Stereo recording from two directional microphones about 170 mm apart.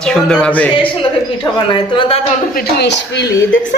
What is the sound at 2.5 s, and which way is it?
Speech, 70° left (ahead or behind).